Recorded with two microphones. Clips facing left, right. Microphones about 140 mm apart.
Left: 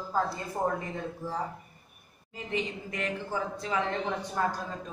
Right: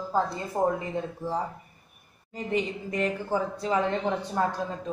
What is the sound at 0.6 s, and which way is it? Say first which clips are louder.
Speech: right 5 dB; 25° right (ahead or behind).